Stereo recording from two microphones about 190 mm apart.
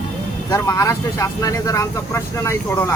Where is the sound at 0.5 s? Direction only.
15° left (ahead or behind).